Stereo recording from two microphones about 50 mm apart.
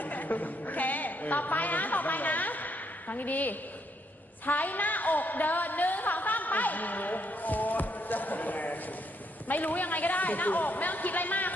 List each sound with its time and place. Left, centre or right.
0.0 s a woman's voice: left